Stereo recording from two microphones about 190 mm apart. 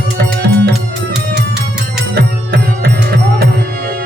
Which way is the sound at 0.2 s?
60° right (ahead or behind).